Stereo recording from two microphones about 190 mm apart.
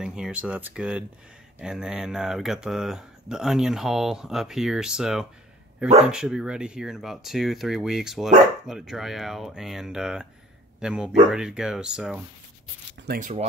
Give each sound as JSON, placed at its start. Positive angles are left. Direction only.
{"t": 0.0, "sound": "a man's voice", "side_deg": -5}
{"t": 13.0, "sound": "speech", "side_deg": -55}